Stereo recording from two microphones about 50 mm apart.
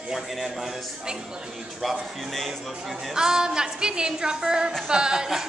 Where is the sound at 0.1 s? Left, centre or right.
Centre.